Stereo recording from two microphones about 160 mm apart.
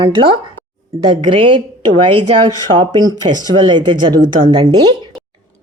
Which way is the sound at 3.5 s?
30° right (ahead or behind).